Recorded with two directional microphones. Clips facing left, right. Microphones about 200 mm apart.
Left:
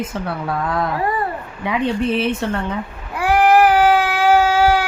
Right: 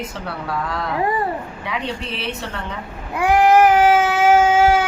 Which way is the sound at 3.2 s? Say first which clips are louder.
Even; 20° right (ahead or behind).